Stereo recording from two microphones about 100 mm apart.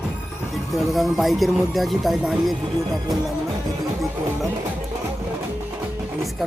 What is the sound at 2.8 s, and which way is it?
Speech, 35° right (ahead or behind).